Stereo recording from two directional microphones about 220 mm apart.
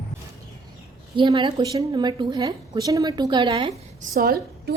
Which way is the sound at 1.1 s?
20° right (ahead or behind).